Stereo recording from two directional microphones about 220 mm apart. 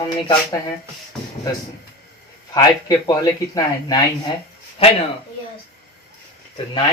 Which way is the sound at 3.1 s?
15° left (ahead or behind).